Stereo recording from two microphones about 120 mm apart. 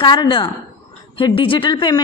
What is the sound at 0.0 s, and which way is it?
A woman's voice, 40° left (ahead or behind).